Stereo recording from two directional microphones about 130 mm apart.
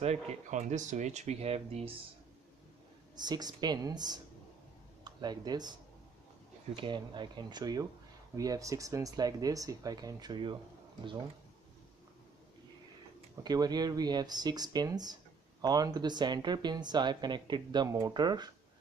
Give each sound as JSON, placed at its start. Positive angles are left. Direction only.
{"t": 0.0, "sound": "speech", "side_deg": -55}
{"t": 3.2, "sound": "speech", "side_deg": -30}
{"t": 13.4, "sound": "speech", "side_deg": -30}